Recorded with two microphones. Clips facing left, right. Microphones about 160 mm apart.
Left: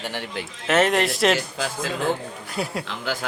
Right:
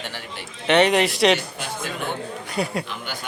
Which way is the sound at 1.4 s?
90° left.